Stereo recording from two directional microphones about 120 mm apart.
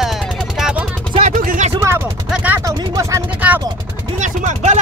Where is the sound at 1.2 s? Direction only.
85° right.